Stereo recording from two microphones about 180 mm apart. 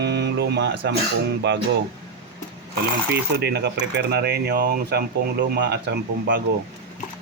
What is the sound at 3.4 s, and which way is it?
Speech, 65° right (ahead or behind).